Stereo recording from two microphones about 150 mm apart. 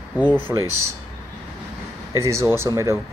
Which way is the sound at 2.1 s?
20° right (ahead or behind).